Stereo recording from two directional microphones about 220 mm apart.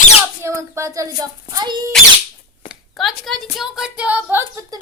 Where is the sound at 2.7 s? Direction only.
Centre (ahead or behind).